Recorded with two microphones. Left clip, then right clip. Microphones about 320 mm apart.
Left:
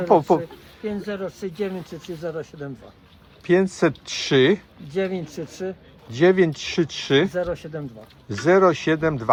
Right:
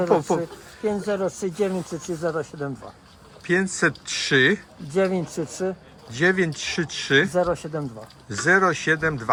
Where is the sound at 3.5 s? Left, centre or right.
Centre.